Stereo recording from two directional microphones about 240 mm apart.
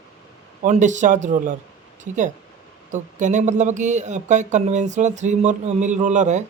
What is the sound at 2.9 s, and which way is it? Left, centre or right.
Speech, right.